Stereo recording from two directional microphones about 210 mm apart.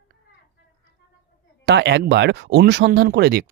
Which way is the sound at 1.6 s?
55° right (ahead or behind).